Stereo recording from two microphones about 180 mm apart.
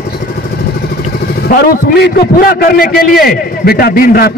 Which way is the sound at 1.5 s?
60° left (ahead or behind).